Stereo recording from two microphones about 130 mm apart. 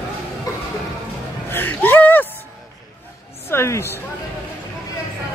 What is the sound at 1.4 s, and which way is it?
Speech, 15° left (ahead or behind).